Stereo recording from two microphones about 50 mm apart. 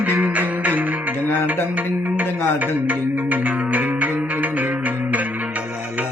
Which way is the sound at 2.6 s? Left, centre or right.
Right.